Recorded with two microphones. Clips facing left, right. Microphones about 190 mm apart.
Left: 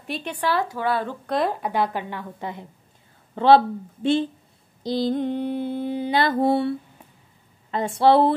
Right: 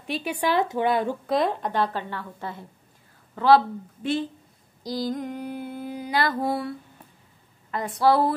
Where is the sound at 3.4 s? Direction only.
25° left (ahead or behind).